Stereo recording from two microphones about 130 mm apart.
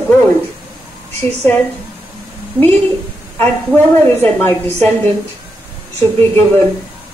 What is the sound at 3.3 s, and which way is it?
A woman's voice, 15° left (ahead or behind).